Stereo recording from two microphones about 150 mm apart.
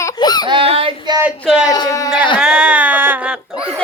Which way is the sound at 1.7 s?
25° left (ahead or behind).